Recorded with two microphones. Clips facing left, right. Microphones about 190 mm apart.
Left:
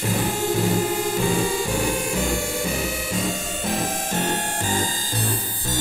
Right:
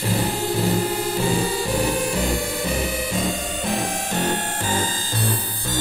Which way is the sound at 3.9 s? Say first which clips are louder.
Right 1 dB; 40° left (ahead or behind).